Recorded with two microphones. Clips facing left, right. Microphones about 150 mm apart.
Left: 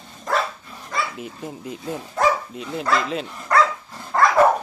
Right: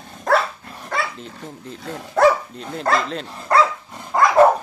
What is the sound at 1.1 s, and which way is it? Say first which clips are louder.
Speech: left 3 dB; 10° left (ahead or behind).